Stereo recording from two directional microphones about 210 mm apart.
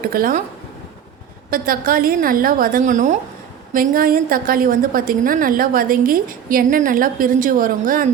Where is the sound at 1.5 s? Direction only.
45° right (ahead or behind).